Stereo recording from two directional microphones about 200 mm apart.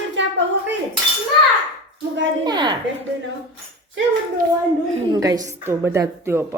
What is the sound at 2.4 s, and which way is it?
Speech, 20° right (ahead or behind).